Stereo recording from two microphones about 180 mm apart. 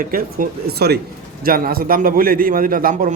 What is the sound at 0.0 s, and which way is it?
A man's voice, 55° right (ahead or behind).